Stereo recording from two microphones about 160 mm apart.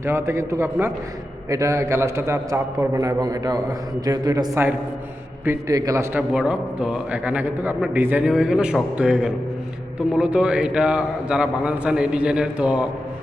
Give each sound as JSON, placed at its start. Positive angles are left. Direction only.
{"t": 0.0, "sound": "a man's voice", "side_deg": -15}
{"t": 6.3, "sound": "a man's voice", "side_deg": -5}